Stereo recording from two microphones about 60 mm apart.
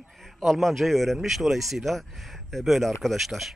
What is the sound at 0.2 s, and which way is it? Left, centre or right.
Speech, centre.